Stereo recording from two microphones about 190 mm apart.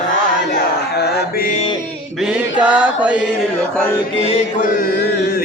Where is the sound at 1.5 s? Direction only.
30° left (ahead or behind).